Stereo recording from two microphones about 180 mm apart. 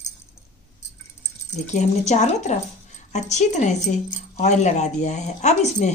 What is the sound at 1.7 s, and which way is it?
Speech, 40° left (ahead or behind).